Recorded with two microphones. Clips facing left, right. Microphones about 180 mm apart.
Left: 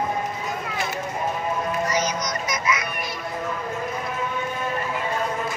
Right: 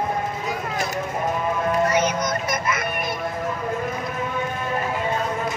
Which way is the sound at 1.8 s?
60° right (ahead or behind).